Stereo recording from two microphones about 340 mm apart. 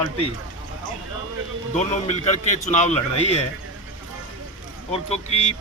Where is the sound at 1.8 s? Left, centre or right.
Centre.